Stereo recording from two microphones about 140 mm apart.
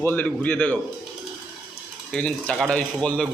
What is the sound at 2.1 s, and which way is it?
Speech, 5° left (ahead or behind).